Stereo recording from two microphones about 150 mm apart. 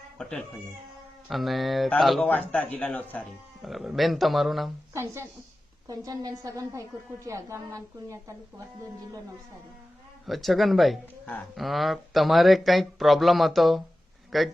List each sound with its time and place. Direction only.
0.2 s speech: 5° left (ahead or behind)
3.6 s speech: centre (ahead or behind)
4.9 s a woman's voice: 20° right (ahead or behind)
10.2 s speech: centre (ahead or behind)